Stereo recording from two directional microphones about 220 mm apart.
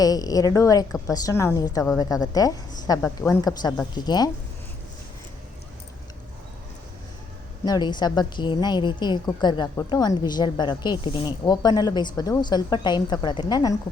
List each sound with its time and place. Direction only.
0.0 s a woman's voice: 15° left (ahead or behind)
7.6 s a woman's voice: 20° left (ahead or behind)